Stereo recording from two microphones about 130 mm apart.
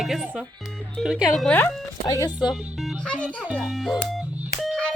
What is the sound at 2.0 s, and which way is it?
Speech, 30° left (ahead or behind).